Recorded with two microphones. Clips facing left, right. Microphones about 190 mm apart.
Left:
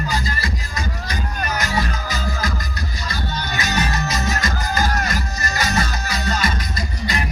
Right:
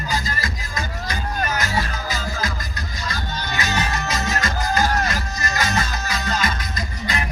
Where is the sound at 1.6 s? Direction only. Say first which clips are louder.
Left 1 dB; 40° left (ahead or behind).